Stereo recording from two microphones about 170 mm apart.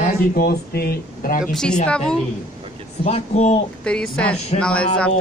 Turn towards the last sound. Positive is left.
turn(degrees=5)  # may be behind; listen again after turning